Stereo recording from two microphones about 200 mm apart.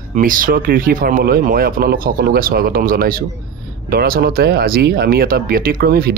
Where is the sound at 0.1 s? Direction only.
45° right (ahead or behind).